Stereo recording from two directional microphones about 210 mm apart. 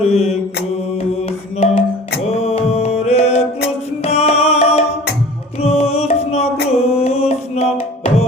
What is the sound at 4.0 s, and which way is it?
Music, 30° left (ahead or behind).